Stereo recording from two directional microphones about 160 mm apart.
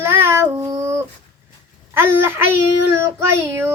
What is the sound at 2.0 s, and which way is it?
Child singing, 15° right (ahead or behind).